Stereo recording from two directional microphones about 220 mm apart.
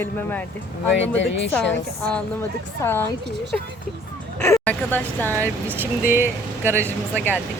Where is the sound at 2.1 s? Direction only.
5° left (ahead or behind).